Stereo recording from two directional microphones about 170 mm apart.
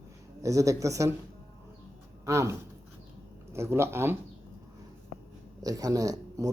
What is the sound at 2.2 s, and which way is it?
Speech, 15° right (ahead or behind).